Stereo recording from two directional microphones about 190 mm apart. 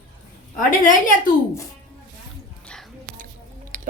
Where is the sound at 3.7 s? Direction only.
40° right (ahead or behind).